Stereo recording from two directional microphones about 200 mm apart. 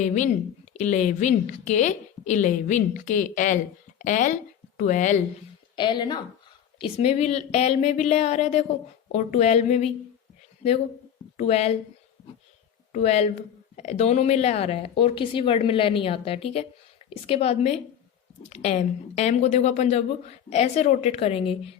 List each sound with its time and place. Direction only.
0.0 s a woman's voice: 35° left (ahead or behind)
5.7 s a woman's voice: 20° left (ahead or behind)
12.9 s a woman's voice: 35° left (ahead or behind)